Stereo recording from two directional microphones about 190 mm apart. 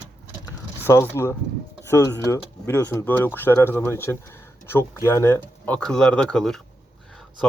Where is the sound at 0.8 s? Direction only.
15° left (ahead or behind).